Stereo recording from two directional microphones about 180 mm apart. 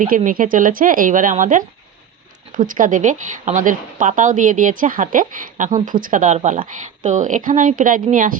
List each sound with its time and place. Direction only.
0.3 s speech: 50° right (ahead or behind)